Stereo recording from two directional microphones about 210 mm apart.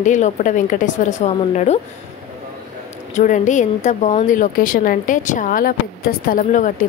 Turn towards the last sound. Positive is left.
turn(degrees=40)  # may be behind; listen again after turning